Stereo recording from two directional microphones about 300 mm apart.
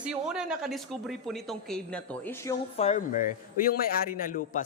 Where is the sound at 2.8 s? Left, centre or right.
Left.